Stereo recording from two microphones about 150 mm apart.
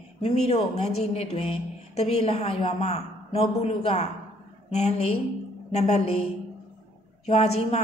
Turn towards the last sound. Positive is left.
turn(degrees=45)  # may be behind; listen again after turning